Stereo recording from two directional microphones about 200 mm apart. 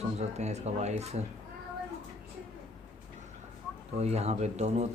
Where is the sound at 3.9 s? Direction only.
35° right (ahead or behind).